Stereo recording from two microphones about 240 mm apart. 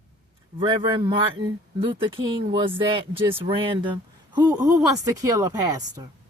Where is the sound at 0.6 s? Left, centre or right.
Centre.